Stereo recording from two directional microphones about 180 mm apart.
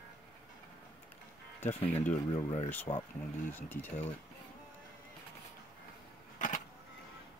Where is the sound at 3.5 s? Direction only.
10° left (ahead or behind).